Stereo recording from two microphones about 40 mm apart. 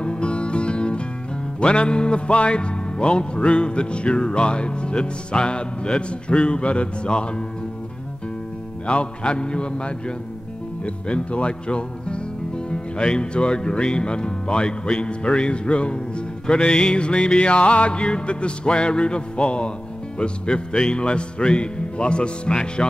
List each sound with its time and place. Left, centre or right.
0.0 s music: left
1.6 s speech: left
8.8 s speech: left